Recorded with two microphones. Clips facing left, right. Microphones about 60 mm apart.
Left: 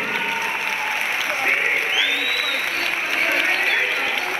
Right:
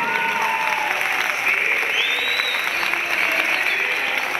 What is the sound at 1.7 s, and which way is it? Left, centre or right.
Applause, right.